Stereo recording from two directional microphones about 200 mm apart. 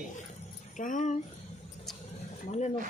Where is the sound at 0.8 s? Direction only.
40° left (ahead or behind).